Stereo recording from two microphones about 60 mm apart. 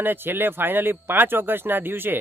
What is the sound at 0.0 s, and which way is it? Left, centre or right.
Speech, right.